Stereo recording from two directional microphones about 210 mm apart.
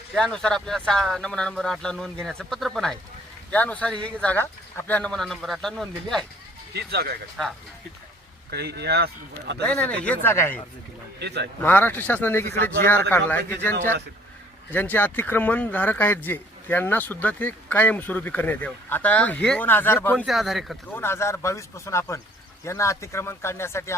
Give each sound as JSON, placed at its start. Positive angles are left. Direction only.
{"t": 0.1, "sound": "speech", "side_deg": 5}
{"t": 6.7, "sound": "speech", "side_deg": -50}
{"t": 8.4, "sound": "speech", "side_deg": -50}
{"t": 9.6, "sound": "speech", "side_deg": 5}
{"t": 11.2, "sound": "speech", "side_deg": -55}
{"t": 11.6, "sound": "speech", "side_deg": 10}
{"t": 21.0, "sound": "speech", "side_deg": 10}